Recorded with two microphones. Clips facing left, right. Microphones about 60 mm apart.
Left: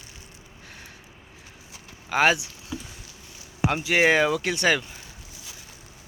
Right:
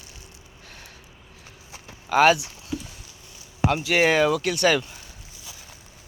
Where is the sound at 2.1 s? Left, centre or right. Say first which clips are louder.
Right 4 dB; centre.